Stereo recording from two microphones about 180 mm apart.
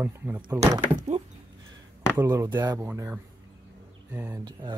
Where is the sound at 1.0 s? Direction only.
35° right (ahead or behind).